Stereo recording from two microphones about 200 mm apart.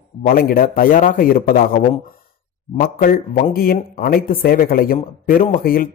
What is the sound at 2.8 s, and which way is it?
A man's voice, 45° left (ahead or behind).